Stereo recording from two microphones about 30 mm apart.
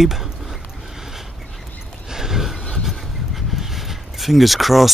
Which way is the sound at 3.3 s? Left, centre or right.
Centre.